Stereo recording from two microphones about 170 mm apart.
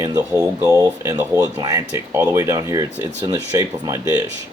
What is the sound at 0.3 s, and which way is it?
Speech, 20° right (ahead or behind).